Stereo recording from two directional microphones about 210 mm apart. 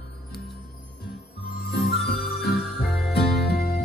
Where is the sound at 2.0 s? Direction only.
50° left (ahead or behind).